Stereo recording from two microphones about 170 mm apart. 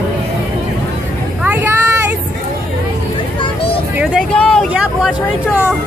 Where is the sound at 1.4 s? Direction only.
10° right (ahead or behind).